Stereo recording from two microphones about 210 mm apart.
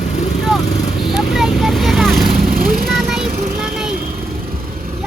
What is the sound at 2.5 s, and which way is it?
Vehicle, 45° right (ahead or behind).